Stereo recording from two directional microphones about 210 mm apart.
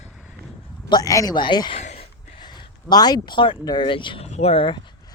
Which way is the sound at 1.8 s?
30° left (ahead or behind).